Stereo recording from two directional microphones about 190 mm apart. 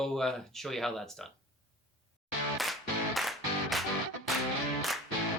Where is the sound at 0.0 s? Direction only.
Centre (ahead or behind).